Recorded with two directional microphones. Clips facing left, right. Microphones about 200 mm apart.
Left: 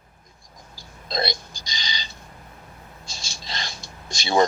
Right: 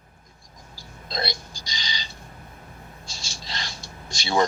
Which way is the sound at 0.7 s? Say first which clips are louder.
Left 4 dB; 20° left (ahead or behind).